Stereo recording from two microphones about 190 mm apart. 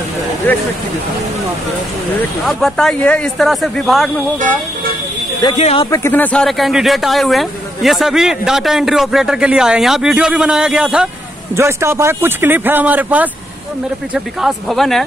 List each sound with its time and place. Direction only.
2.4 s speech: centre (ahead or behind)
5.6 s speech: 35° left (ahead or behind)
5.9 s speech: 10° left (ahead or behind)